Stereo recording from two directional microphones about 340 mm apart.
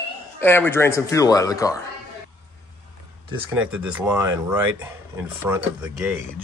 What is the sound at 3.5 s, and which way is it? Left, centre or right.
Speech, centre.